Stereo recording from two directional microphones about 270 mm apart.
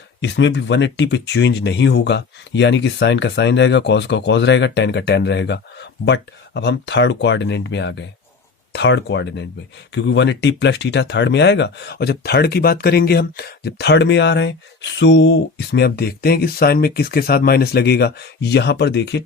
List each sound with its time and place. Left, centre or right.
0.2 s speech: left